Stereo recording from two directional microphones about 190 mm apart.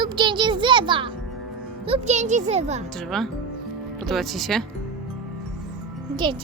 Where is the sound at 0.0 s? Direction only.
25° right (ahead or behind).